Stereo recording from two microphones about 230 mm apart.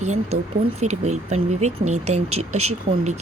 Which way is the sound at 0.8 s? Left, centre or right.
Right.